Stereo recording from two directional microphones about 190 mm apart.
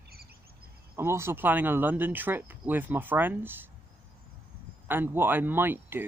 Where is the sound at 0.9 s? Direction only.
15° right (ahead or behind).